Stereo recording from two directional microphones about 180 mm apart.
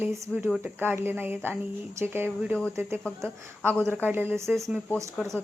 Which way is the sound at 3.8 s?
10° right (ahead or behind).